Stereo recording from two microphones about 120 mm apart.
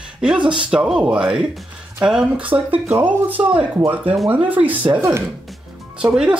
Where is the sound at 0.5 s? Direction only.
5° right (ahead or behind).